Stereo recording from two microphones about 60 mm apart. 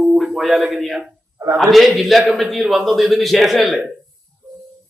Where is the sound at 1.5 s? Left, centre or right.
Centre.